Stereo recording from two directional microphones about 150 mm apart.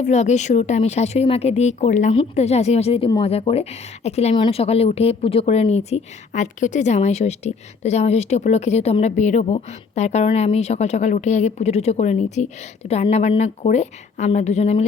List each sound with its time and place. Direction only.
0.0 s speech: 50° left (ahead or behind)